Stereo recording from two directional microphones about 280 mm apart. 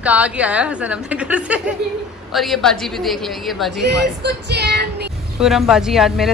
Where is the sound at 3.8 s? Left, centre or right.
Right.